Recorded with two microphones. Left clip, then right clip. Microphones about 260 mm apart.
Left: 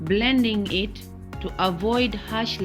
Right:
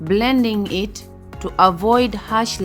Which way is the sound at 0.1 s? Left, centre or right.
Right.